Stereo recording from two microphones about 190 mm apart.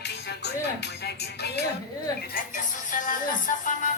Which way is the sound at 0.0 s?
60° left (ahead or behind).